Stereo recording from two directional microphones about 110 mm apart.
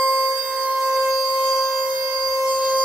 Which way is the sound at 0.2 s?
10° right (ahead or behind).